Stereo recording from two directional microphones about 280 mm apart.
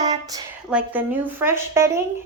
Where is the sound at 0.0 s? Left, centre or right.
Centre.